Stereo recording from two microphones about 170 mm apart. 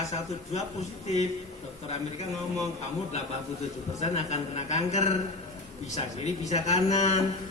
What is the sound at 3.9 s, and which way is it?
A man's voice, 40° left (ahead or behind).